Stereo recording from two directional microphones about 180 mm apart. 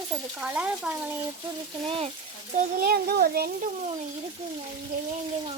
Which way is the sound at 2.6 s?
55° right (ahead or behind).